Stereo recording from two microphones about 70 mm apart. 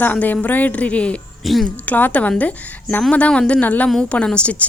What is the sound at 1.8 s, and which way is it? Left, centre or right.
A woman's voice, left.